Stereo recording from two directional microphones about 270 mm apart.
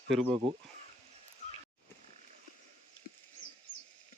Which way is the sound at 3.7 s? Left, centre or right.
Left.